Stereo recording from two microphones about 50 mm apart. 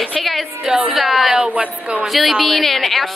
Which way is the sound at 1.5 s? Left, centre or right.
Right.